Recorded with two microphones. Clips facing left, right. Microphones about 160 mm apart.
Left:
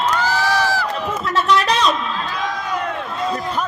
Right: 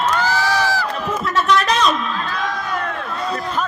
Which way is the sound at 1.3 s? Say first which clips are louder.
Even; 30° left (ahead or behind).